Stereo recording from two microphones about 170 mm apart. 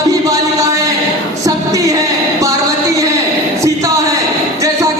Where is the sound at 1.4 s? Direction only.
20° right (ahead or behind).